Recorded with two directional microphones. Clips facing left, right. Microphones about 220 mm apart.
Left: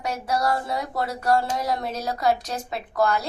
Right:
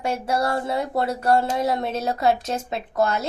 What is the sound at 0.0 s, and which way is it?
Speech, 25° right (ahead or behind).